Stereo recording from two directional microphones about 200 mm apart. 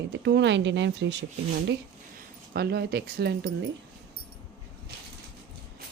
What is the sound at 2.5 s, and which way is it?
A woman's voice, 55° right (ahead or behind).